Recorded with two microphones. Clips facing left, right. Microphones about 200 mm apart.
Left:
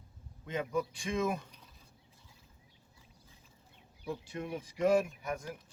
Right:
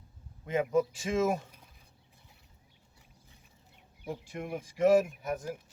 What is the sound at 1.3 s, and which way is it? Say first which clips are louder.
Speech: right 5 dB; 45° right (ahead or behind).